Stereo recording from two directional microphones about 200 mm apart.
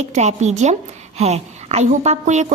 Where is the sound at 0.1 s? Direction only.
35° right (ahead or behind).